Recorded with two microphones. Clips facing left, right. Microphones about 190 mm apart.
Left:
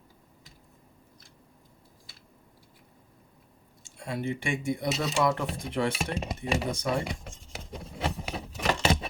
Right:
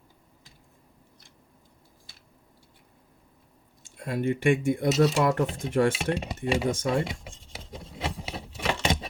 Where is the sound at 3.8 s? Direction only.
55° right (ahead or behind).